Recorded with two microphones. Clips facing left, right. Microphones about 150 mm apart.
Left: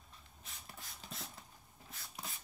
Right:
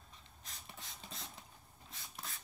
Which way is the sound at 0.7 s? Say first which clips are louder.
Left 1 dB; centre (ahead or behind).